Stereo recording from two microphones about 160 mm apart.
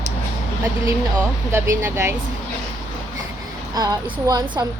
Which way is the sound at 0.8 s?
15° right (ahead or behind).